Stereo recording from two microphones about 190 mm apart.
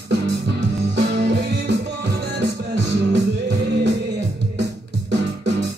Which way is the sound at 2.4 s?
65° right (ahead or behind).